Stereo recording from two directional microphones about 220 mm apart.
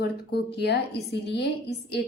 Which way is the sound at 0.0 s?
50° left (ahead or behind).